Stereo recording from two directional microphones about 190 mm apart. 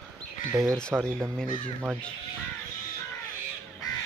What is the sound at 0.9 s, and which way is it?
Speech, 10° right (ahead or behind).